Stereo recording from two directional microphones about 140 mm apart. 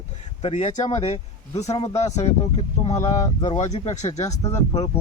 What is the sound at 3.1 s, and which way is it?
Speech, 30° left (ahead or behind).